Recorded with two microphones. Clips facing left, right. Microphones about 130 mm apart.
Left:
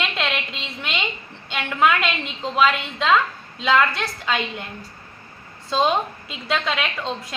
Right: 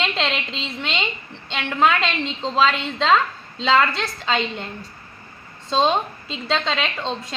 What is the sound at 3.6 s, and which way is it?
A woman's voice, 25° right (ahead or behind).